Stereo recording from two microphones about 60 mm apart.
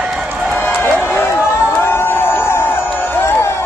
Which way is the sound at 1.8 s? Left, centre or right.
Left.